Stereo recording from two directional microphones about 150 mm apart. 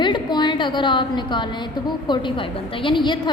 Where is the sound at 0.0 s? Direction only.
30° left (ahead or behind).